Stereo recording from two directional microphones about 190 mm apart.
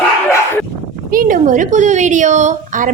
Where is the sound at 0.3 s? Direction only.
15° left (ahead or behind).